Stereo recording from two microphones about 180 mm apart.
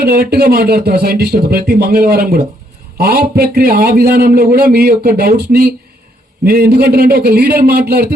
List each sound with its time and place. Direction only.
0.0 s a man's voice: 60° right (ahead or behind)